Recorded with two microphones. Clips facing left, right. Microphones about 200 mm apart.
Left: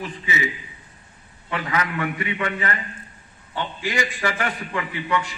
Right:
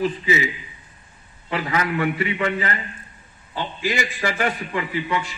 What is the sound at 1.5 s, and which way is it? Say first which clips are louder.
A man's voice: right 2 dB; 30° right (ahead or behind).